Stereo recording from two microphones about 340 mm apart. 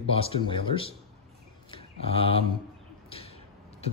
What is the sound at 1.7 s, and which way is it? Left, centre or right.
Mantra, centre.